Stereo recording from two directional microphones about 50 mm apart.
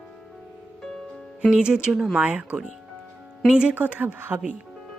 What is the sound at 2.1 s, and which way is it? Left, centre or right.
Speech, right.